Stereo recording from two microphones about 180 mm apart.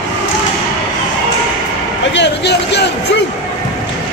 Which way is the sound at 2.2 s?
70° left (ahead or behind).